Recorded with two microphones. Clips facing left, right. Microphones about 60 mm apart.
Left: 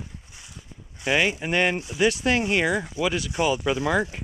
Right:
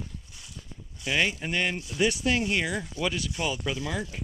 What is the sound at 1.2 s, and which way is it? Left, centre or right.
Speech, centre.